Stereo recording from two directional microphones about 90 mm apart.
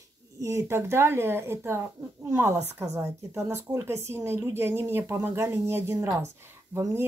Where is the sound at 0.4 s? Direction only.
35° right (ahead or behind).